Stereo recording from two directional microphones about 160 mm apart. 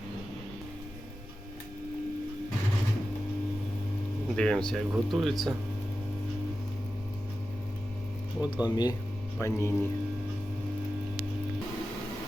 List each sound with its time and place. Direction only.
4.4 s speech: 5° left (ahead or behind)
8.7 s speech: 25° left (ahead or behind)